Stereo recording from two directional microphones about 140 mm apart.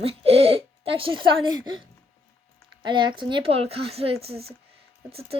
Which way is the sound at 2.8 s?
35° right (ahead or behind).